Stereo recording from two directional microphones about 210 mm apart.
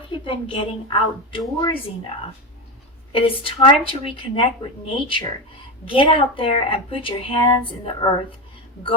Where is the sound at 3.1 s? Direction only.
25° left (ahead or behind).